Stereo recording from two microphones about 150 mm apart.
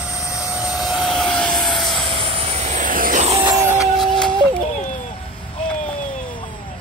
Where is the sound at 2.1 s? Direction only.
50° right (ahead or behind); by 3.2 s 65° right (ahead or behind).